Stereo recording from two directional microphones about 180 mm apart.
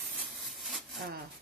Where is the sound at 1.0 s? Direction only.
55° right (ahead or behind).